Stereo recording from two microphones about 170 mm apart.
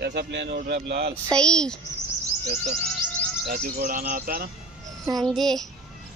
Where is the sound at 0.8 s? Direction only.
70° right (ahead or behind).